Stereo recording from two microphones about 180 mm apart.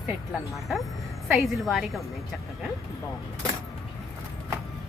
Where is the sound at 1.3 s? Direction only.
Centre (ahead or behind).